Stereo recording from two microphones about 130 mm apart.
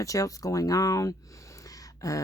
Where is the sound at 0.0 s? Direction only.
25° left (ahead or behind).